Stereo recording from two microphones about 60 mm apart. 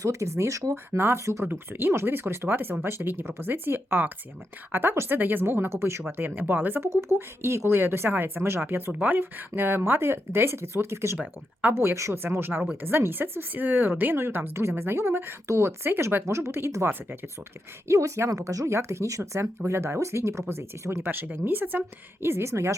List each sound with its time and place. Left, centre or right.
0.0 s speech: right
0.9 s speech: right
1.5 s speech: right
6.8 s speech: right
14.9 s speech: right
17.8 s speech: right